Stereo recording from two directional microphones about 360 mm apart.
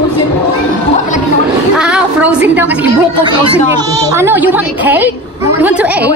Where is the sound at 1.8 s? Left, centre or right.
Centre.